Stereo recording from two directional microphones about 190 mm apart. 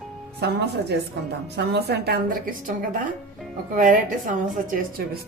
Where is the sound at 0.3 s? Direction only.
60° right (ahead or behind).